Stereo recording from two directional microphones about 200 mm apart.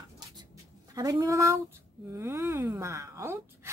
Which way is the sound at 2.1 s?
15° right (ahead or behind).